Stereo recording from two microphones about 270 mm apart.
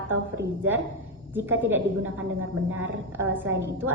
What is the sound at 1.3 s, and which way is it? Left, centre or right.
Speech, centre.